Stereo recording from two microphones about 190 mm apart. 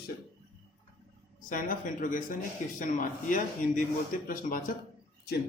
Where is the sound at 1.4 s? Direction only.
45° left (ahead or behind).